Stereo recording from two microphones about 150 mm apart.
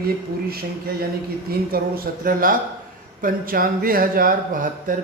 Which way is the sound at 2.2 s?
70° right (ahead or behind).